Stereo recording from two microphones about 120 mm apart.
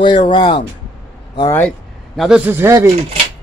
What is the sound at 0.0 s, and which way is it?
Speech, 40° left (ahead or behind).